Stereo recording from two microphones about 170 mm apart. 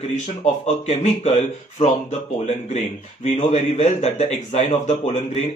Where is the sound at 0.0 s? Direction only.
40° left (ahead or behind).